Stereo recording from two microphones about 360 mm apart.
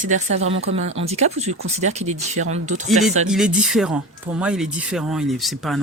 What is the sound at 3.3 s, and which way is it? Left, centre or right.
Speech, centre.